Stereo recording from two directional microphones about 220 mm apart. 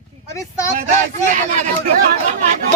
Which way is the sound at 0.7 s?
35° right (ahead or behind).